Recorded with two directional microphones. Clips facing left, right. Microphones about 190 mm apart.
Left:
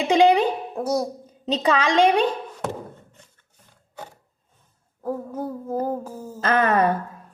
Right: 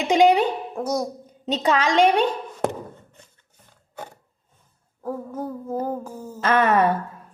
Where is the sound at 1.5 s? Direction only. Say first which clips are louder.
Even; 35° left (ahead or behind).